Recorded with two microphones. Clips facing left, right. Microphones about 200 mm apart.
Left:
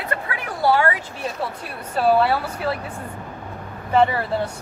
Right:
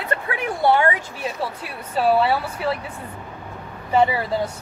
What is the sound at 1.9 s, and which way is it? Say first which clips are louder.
Speech: left 1 dB; centre (ahead or behind).